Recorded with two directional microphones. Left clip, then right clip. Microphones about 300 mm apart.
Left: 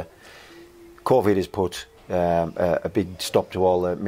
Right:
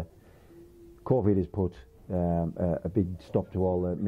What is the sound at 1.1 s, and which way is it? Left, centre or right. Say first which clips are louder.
Speech: left 8 dB; centre.